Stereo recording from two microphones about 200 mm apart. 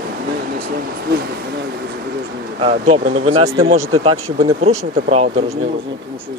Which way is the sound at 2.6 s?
35° right (ahead or behind).